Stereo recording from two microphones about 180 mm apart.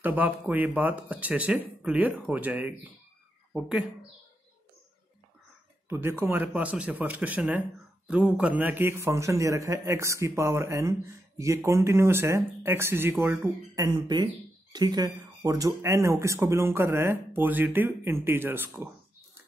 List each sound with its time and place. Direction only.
0.0 s a man's voice: 10° right (ahead or behind)
5.9 s a man's voice: 10° right (ahead or behind)
13.7 s a man's voice: 25° right (ahead or behind)